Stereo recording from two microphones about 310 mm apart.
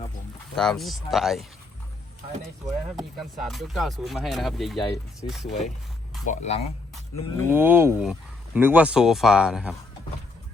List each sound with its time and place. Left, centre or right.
0.5 s speech: centre
2.9 s speech: centre
6.2 s speech: left
7.5 s speech: centre